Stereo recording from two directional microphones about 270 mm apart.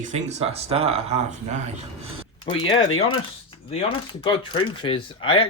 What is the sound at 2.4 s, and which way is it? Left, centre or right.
Speech, centre.